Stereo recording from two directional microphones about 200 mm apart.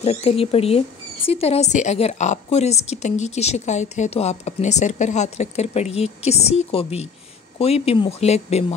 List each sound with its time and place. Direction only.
0.0 s speech: 30° left (ahead or behind)